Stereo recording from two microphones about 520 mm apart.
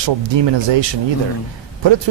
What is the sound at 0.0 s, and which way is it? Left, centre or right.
Speech, right.